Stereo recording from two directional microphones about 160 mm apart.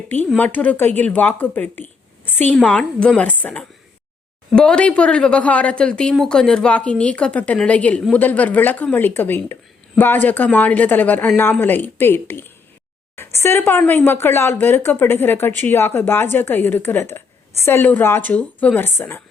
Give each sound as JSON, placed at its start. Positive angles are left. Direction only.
{"t": 0.3, "sound": "speech", "side_deg": 10}